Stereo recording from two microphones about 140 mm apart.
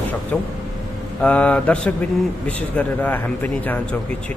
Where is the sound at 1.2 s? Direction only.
10° left (ahead or behind).